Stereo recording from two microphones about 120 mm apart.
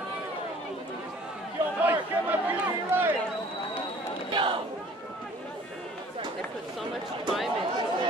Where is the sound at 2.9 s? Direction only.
15° right (ahead or behind).